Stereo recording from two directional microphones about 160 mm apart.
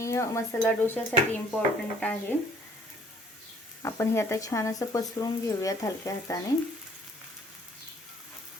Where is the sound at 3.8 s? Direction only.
15° left (ahead or behind).